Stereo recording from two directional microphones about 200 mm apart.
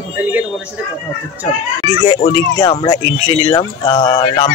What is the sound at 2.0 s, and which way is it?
Speech, 20° left (ahead or behind).